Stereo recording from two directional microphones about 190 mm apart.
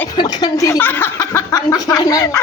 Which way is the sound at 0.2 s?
20° left (ahead or behind).